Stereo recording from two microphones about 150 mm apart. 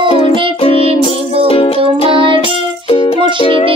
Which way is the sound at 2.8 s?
35° left (ahead or behind).